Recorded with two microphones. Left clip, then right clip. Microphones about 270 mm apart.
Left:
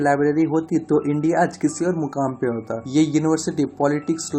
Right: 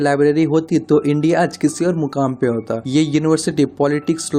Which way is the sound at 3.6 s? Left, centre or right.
Right.